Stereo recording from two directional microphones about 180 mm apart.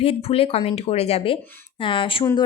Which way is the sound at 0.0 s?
35° left (ahead or behind).